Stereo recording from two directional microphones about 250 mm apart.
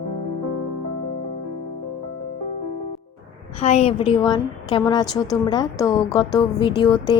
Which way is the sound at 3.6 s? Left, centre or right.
Left.